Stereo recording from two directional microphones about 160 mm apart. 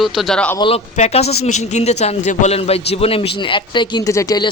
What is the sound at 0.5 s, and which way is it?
A man's voice, 35° left (ahead or behind).